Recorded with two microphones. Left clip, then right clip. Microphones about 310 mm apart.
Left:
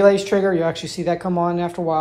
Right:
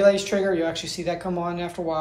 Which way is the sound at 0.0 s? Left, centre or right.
Centre.